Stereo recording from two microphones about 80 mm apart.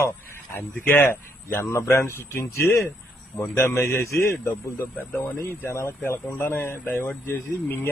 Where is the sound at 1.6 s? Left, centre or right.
Left.